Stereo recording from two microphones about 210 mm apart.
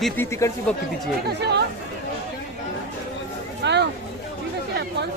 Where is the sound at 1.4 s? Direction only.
55° right (ahead or behind).